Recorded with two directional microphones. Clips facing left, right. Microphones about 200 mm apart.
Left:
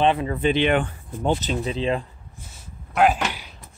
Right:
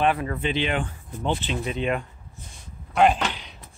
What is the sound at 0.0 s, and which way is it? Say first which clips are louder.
Speech: left 3 dB; 25° left (ahead or behind).